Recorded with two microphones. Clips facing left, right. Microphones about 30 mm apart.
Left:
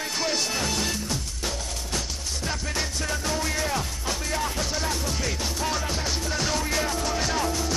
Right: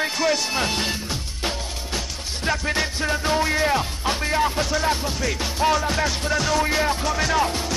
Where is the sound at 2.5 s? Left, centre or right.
Right.